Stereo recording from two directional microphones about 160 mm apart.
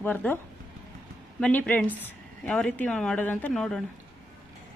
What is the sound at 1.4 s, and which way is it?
A woman's voice, 10° left (ahead or behind).